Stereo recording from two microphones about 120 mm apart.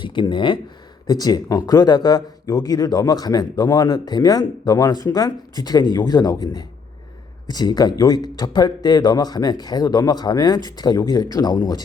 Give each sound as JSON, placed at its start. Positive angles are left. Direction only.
{"t": 0.0, "sound": "speech", "side_deg": 40}